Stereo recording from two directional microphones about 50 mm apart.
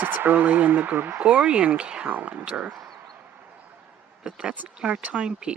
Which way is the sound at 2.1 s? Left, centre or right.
Right.